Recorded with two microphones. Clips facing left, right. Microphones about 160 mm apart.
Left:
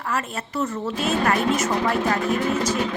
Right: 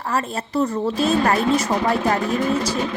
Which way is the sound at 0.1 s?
35° right (ahead or behind).